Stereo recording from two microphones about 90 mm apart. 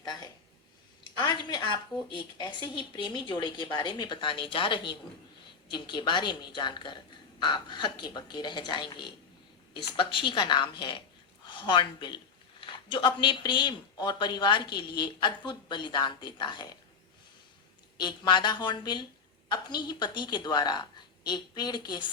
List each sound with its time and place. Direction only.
0.0 s speech: 55° left (ahead or behind)
9.7 s speech: 70° left (ahead or behind)
18.0 s speech: 60° left (ahead or behind)